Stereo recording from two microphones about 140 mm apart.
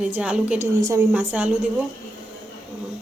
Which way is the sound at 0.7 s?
25° right (ahead or behind).